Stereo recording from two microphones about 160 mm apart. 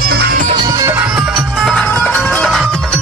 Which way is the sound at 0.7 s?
20° right (ahead or behind).